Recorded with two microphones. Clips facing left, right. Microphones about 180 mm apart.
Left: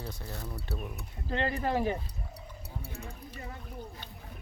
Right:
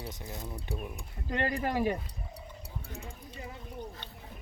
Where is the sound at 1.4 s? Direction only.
25° left (ahead or behind).